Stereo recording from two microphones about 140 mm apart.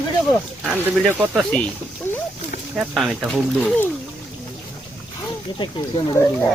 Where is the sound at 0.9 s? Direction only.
Centre (ahead or behind).